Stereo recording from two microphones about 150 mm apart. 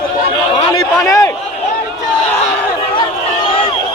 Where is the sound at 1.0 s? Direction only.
20° left (ahead or behind).